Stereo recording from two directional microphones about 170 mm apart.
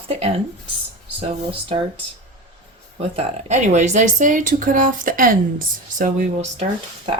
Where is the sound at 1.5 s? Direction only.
30° right (ahead or behind).